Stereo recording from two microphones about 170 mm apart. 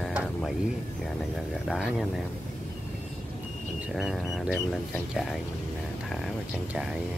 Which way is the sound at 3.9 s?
Centre (ahead or behind).